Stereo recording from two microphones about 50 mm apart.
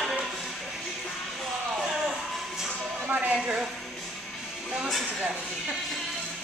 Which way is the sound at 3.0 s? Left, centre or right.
Right.